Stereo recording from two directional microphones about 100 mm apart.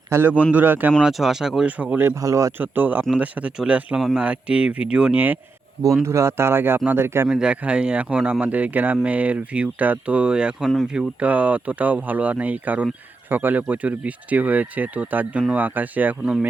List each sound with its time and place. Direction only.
0.1 s speech: 20° right (ahead or behind)
1.0 s speech: 5° right (ahead or behind); by 2.5 s 30° right (ahead or behind)
2.6 s speech: 20° right (ahead or behind)
7.3 s speech: 10° right (ahead or behind)